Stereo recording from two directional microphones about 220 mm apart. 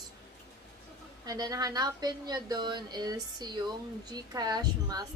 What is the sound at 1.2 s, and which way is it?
Speech, 15° right (ahead or behind).